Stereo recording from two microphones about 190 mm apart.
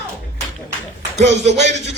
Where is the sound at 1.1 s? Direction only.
35° right (ahead or behind).